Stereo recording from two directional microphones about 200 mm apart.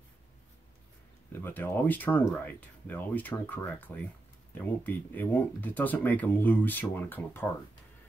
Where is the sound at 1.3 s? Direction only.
10° left (ahead or behind).